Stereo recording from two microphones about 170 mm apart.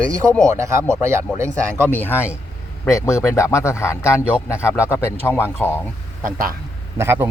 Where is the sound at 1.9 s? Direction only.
10° left (ahead or behind).